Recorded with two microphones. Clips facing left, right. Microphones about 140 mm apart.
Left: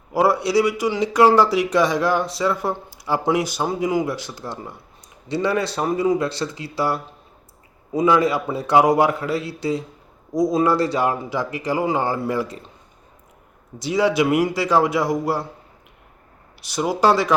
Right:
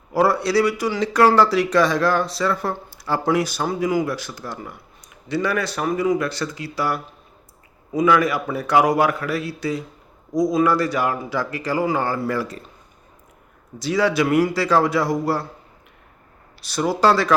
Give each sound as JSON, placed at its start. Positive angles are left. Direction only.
{"t": 0.1, "sound": "a man's voice", "side_deg": 15}
{"t": 13.7, "sound": "a man's voice", "side_deg": 20}
{"t": 16.6, "sound": "a man's voice", "side_deg": 15}